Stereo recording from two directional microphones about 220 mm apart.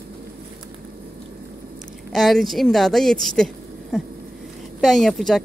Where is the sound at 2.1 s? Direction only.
Centre (ahead or behind).